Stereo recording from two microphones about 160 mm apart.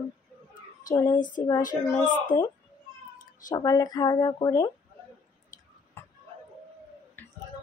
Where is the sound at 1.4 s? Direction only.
20° left (ahead or behind).